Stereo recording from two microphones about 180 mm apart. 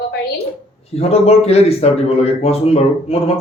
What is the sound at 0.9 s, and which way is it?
A man's voice, 35° left (ahead or behind).